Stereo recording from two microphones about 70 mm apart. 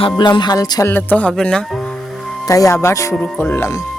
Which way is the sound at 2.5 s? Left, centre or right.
Left.